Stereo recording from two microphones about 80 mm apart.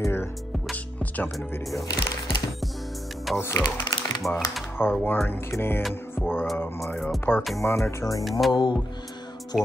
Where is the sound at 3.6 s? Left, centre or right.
Left.